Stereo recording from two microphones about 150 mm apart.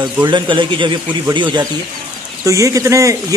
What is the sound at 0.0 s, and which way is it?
A man's voice, 30° right (ahead or behind).